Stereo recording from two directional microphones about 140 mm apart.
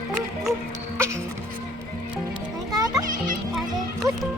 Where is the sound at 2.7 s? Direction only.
25° right (ahead or behind).